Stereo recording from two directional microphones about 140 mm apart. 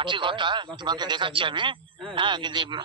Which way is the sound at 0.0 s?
35° right (ahead or behind).